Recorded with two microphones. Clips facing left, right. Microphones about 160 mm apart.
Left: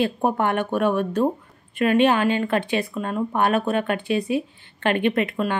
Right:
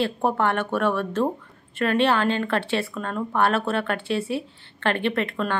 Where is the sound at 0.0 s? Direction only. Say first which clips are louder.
Left 1 dB; 15° left (ahead or behind).